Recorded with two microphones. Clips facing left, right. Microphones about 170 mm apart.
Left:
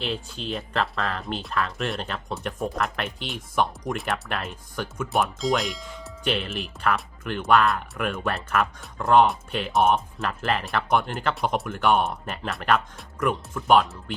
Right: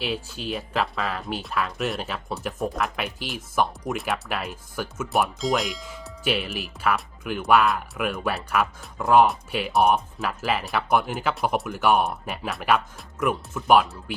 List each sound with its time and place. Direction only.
0.0 s speech: 5° right (ahead or behind)